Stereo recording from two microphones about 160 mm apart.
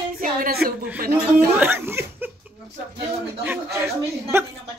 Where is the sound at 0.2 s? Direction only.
65° right (ahead or behind).